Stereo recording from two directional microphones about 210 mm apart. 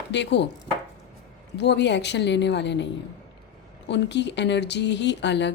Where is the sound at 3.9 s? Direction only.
55° left (ahead or behind).